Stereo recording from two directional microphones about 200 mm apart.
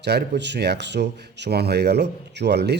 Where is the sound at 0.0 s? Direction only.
55° right (ahead or behind).